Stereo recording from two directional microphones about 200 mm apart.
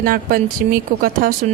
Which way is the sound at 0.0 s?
45° right (ahead or behind).